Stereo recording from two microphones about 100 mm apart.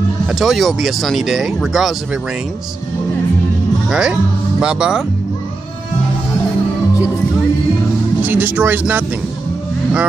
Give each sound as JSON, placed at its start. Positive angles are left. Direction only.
{"t": 0.3, "sound": "speech", "side_deg": 0}
{"t": 3.9, "sound": "speech", "side_deg": -5}
{"t": 8.2, "sound": "speech", "side_deg": -20}